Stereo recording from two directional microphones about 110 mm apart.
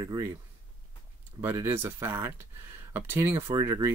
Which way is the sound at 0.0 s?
35° right (ahead or behind).